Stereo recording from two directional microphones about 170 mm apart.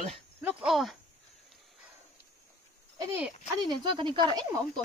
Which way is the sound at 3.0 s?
15° right (ahead or behind).